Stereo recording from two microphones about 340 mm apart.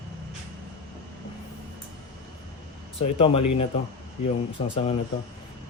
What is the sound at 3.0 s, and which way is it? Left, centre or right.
Speech, centre.